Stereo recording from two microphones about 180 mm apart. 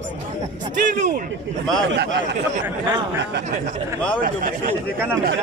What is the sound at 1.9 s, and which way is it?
Speech, 75° right (ahead or behind).